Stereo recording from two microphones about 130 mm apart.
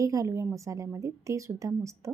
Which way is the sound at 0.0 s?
25° right (ahead or behind).